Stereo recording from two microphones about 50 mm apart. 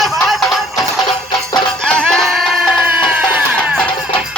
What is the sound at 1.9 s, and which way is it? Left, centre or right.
Music, centre.